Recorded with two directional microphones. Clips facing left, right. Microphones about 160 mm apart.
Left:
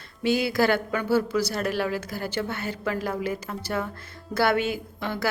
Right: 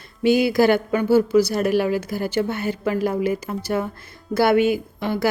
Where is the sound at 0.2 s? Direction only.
15° right (ahead or behind).